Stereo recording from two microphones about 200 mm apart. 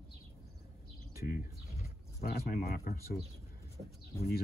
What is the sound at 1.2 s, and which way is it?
Speech, 45° left (ahead or behind).